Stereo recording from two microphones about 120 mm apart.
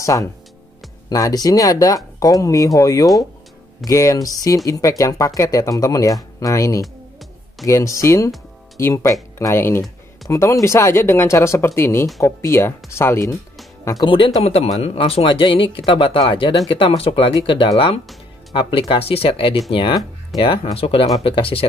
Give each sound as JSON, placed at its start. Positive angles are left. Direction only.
{"t": 0.0, "sound": "speech", "side_deg": 25}
{"t": 14.0, "sound": "speech", "side_deg": 45}